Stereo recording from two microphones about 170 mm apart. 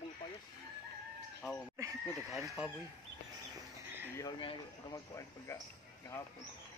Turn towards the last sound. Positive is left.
turn(degrees=20)  # may be behind; listen again after turning